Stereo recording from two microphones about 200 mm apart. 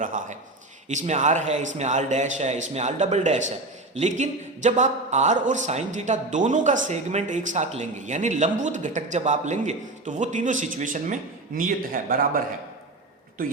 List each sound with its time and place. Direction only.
0.0 s speech: 40° right (ahead or behind)